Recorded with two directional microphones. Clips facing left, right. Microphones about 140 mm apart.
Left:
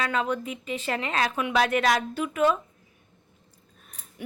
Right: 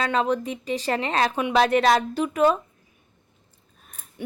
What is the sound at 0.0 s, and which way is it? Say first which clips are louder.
Speech: right 4 dB; 30° right (ahead or behind).